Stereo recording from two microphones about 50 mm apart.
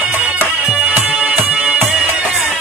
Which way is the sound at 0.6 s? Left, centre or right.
Right.